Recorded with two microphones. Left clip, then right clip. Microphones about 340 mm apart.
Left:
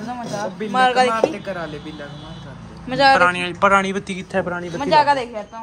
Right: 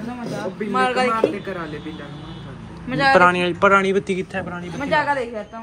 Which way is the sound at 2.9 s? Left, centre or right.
Left.